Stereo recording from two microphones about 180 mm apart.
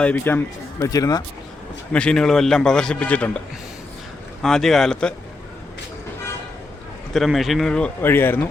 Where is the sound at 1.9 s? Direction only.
5° left (ahead or behind).